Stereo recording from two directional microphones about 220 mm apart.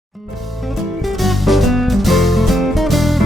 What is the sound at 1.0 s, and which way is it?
Music, centre (ahead or behind).